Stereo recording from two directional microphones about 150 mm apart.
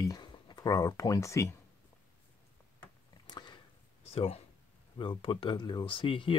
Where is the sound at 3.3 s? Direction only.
30° left (ahead or behind).